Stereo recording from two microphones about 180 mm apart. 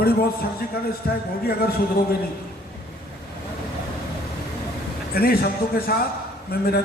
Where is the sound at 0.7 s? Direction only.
60° left (ahead or behind).